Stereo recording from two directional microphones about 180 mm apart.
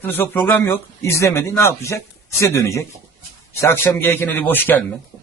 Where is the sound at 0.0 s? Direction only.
10° left (ahead or behind).